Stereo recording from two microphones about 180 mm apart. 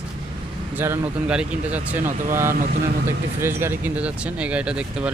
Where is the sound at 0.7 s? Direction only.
10° right (ahead or behind).